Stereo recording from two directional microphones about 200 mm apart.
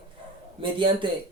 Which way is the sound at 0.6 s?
25° right (ahead or behind).